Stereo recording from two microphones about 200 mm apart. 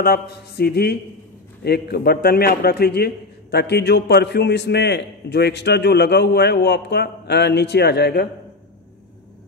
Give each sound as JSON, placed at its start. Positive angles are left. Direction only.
{"t": 0.0, "sound": "mantra", "side_deg": 50}
{"t": 1.6, "sound": "a man's voice", "side_deg": 55}